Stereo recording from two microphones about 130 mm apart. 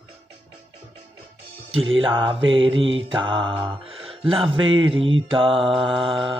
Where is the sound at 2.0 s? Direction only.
40° right (ahead or behind).